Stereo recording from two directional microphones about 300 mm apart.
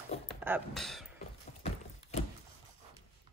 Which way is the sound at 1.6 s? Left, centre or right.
Left.